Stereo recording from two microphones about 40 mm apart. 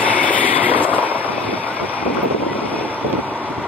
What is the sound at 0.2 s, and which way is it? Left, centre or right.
Vehicle, left.